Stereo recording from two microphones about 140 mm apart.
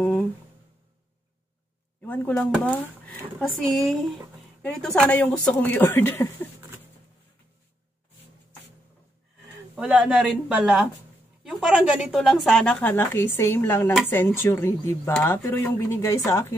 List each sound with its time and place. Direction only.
2.0 s speech: 10° left (ahead or behind)
9.8 s speech: 5° right (ahead or behind)
12.8 s speech: 15° left (ahead or behind)